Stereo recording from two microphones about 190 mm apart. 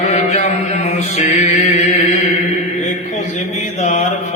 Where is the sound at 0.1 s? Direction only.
40° left (ahead or behind).